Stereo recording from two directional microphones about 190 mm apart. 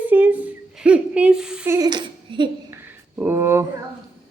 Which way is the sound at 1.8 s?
25° right (ahead or behind).